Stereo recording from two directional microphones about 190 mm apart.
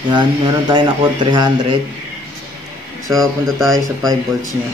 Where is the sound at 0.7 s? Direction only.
25° right (ahead or behind).